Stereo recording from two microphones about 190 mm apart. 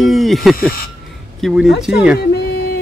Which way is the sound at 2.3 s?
55° left (ahead or behind).